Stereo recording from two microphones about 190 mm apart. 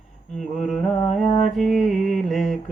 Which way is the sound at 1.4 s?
Centre (ahead or behind).